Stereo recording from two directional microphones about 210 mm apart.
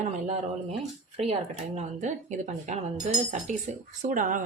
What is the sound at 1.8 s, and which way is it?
Speech, 35° right (ahead or behind).